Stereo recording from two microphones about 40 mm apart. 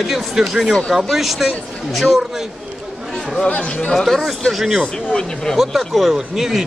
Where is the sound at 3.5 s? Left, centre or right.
Left.